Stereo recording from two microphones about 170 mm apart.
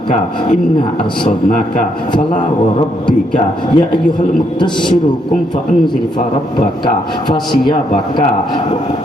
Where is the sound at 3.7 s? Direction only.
25° left (ahead or behind).